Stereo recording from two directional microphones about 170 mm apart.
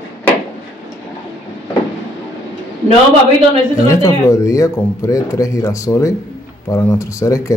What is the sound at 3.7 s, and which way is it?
Speech, 20° left (ahead or behind).